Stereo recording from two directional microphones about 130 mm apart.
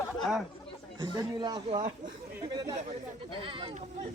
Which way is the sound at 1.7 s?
65° right (ahead or behind).